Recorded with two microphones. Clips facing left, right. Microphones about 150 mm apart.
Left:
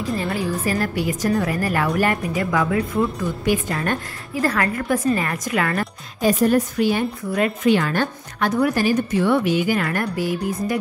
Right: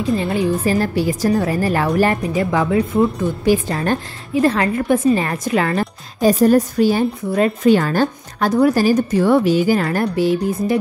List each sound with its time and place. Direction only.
0.0 s a woman's voice: 20° right (ahead or behind)